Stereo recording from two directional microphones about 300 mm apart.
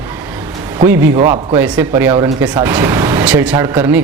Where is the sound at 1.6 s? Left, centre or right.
Centre.